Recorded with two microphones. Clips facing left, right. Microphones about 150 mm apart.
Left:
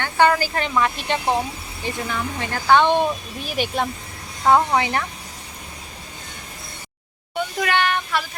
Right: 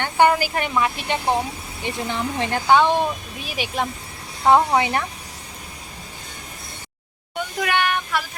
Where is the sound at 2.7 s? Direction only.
5° right (ahead or behind).